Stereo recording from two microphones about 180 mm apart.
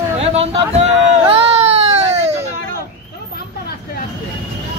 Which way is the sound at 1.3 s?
30° right (ahead or behind).